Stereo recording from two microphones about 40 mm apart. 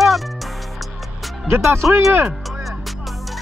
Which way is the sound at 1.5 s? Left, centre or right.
Right.